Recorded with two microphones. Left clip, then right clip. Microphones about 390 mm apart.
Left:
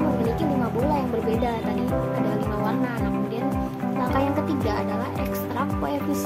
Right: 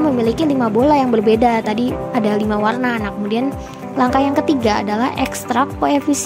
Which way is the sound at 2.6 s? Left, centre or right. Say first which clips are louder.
Right 8 dB; centre.